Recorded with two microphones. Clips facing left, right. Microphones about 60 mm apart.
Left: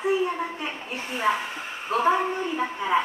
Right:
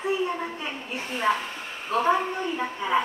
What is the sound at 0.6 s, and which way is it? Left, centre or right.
A woman's voice, centre.